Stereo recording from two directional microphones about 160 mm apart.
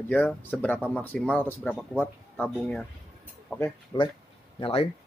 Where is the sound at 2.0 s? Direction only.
10° left (ahead or behind).